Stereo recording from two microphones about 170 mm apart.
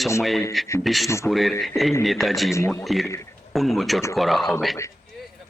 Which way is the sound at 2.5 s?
15° left (ahead or behind).